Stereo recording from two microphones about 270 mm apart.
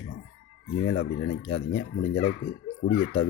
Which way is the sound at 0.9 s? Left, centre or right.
Left.